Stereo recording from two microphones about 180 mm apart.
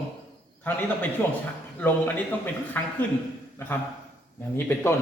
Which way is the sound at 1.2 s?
10° left (ahead or behind).